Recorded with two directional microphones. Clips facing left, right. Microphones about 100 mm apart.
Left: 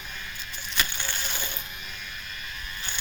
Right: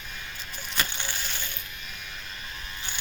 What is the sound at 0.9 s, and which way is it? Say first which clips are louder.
Crushing: left 1 dB; 10° right (ahead or behind).